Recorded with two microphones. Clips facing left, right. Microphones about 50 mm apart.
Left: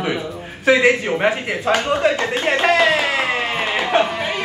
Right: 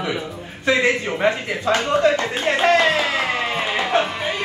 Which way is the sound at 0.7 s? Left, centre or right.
Left.